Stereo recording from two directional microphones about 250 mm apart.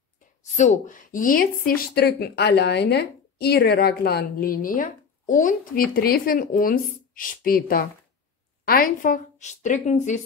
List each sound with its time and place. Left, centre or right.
0.4 s a woman's voice: left